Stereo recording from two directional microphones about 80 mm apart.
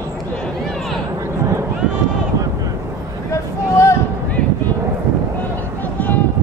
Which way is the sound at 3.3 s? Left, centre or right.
Left.